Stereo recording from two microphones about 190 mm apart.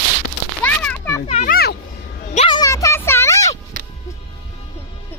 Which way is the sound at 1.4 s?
50° left (ahead or behind).